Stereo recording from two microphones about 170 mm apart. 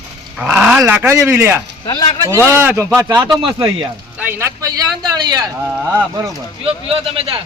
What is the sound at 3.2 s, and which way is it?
Speech, 25° right (ahead or behind).